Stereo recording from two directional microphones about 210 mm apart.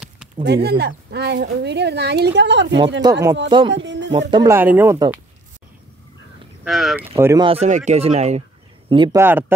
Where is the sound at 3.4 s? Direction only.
25° right (ahead or behind).